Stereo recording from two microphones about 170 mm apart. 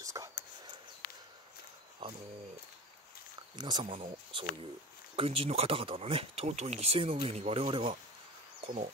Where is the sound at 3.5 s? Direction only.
25° right (ahead or behind).